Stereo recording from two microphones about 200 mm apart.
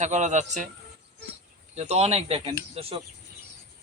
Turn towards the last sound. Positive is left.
turn(degrees=-30)  # may be behind; listen again after turning